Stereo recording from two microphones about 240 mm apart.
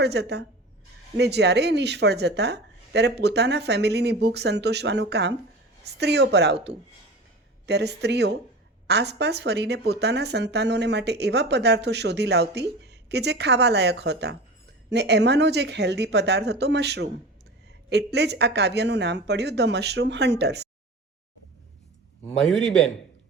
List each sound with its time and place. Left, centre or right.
0.0 s speech: right
22.4 s a man's voice: centre